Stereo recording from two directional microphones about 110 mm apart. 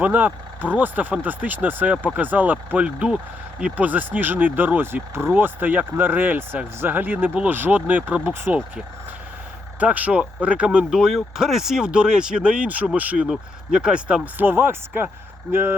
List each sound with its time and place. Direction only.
0.0 s speech: 15° right (ahead or behind)
9.8 s speech: 10° right (ahead or behind)